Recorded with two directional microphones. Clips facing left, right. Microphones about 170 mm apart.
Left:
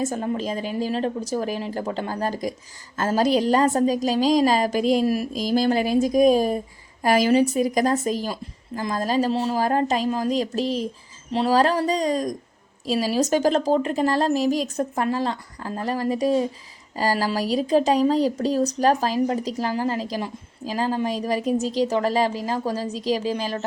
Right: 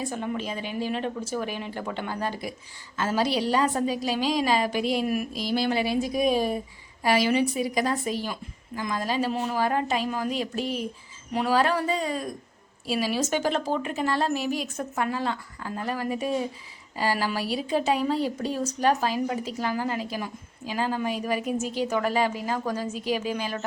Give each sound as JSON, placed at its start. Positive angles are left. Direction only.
{"t": 0.0, "sound": "speech", "side_deg": 40}